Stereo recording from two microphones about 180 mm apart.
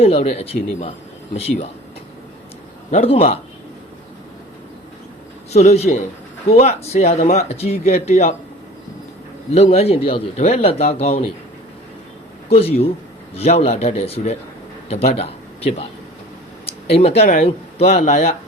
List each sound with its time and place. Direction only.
0.0 s speech: 35° left (ahead or behind)
2.9 s speech: 35° left (ahead or behind)
5.5 s speech: 35° left (ahead or behind)
9.5 s speech: 35° left (ahead or behind)
12.5 s speech: 35° left (ahead or behind)